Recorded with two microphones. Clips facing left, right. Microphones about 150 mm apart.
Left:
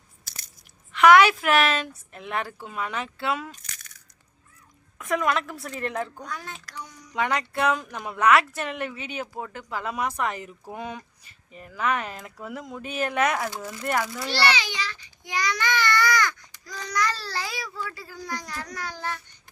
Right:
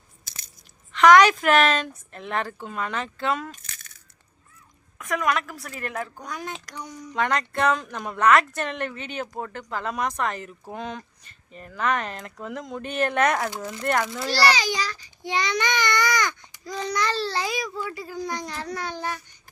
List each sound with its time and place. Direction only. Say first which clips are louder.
0.3 s biting: even; 20° right (ahead or behind)
0.9 s speech: right 1 dB; 10° left (ahead or behind)
3.5 s crushing: right 1 dB; 25° right (ahead or behind)
5.1 s a woman's voice: even; 30° left (ahead or behind)
5.5 s a woman's voice: left 2 dB; centre (ahead or behind)
6.0 s speech: even; 10° right (ahead or behind)
7.1 s speech: right 1 dB; 10° left (ahead or behind)
14.3 s a child's voice: right 5 dB; 40° right (ahead or behind); by 19.2 s 15° right (ahead or behind)